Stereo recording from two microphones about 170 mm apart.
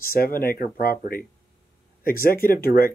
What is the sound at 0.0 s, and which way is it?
Speech, 60° left (ahead or behind).